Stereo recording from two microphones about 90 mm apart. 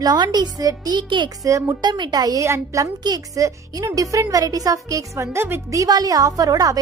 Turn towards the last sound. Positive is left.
turn(degrees=-40)  # may be behind; listen again after turning